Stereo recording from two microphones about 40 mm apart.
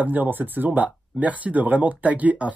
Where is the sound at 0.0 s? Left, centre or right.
Right.